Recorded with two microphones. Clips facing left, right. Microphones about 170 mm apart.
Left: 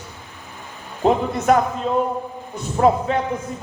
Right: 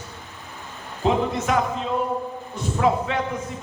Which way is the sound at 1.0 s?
45° left (ahead or behind).